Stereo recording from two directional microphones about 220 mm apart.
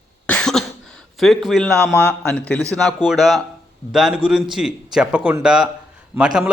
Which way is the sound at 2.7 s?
Centre (ahead or behind).